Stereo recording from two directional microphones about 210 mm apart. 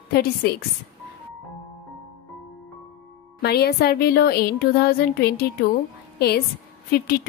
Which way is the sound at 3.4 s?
50° left (ahead or behind).